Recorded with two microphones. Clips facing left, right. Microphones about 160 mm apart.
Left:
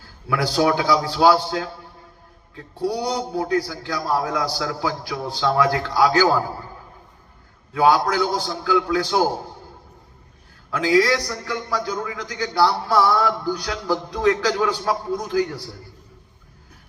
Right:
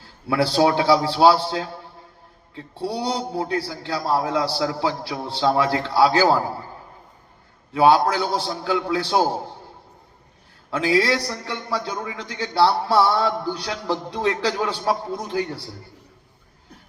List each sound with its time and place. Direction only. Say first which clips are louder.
0.0 s a man's voice: right 2 dB; 30° right (ahead or behind)
2.7 s a man's voice: left 2 dB; 30° right (ahead or behind)
7.7 s a man's voice: right 1 dB; 25° right (ahead or behind)
10.7 s a man's voice: left 2 dB; 25° right (ahead or behind)